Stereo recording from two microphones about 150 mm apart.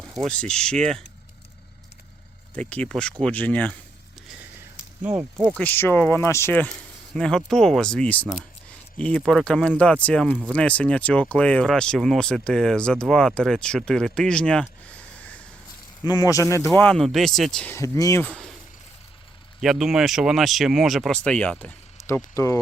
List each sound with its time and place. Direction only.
0.0 s speech: centre (ahead or behind)
2.6 s speech: 10° left (ahead or behind)
5.5 s speech: 15° left (ahead or behind)
16.0 s speech: 25° left (ahead or behind); by 17.7 s 5° left (ahead or behind)
17.7 s speech: 20° left (ahead or behind)
19.6 s speech: centre (ahead or behind); by 22.6 s 20° left (ahead or behind)